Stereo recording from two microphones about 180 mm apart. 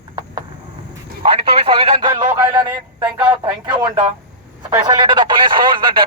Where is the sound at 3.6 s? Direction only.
25° right (ahead or behind).